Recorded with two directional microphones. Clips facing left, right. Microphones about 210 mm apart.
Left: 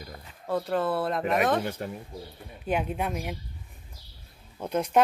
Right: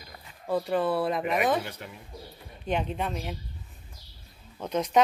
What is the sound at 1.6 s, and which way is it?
Speech, 45° left (ahead or behind).